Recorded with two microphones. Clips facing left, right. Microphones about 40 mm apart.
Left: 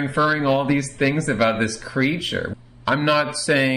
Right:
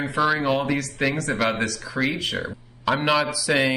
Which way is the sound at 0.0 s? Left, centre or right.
Centre.